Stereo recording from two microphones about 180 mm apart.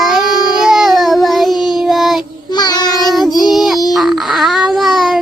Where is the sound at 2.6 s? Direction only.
20° left (ahead or behind).